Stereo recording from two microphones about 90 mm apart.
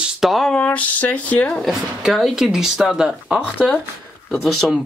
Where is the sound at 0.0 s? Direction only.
Centre (ahead or behind).